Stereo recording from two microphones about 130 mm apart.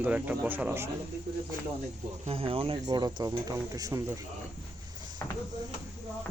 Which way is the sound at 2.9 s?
30° right (ahead or behind).